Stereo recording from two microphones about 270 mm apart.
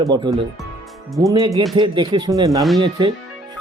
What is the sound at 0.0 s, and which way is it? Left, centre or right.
Speech, centre.